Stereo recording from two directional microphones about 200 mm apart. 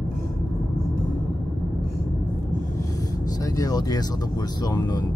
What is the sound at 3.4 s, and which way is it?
Speech, 15° left (ahead or behind).